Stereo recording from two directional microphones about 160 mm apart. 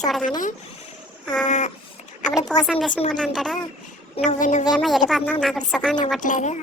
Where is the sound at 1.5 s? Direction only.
45° left (ahead or behind).